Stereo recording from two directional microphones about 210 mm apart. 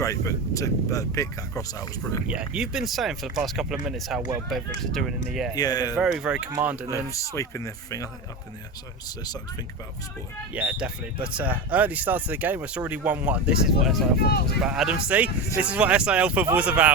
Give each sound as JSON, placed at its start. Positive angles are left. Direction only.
{"t": 0.0, "sound": "speech", "side_deg": 15}
{"t": 2.2, "sound": "speech", "side_deg": -5}
{"t": 5.5, "sound": "speech", "side_deg": 20}
{"t": 6.0, "sound": "speech", "side_deg": 0}
{"t": 7.1, "sound": "speech", "side_deg": 15}
{"t": 10.5, "sound": "speech", "side_deg": -5}
{"t": 14.2, "sound": "speech", "side_deg": 50}
{"t": 14.6, "sound": "speech", "side_deg": -5}